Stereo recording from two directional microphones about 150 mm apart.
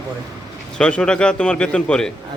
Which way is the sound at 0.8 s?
5° left (ahead or behind).